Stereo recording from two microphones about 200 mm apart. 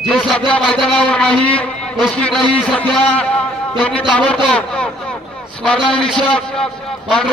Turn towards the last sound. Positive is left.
turn(degrees=5)  # may be behind; listen again after turning